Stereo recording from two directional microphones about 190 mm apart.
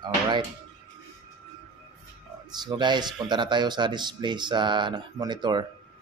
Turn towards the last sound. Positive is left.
turn(degrees=-25)  # may be behind; listen again after turning